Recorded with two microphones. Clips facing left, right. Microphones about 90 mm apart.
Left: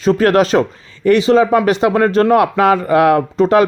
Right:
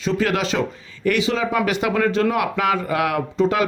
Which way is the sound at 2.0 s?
45° left (ahead or behind).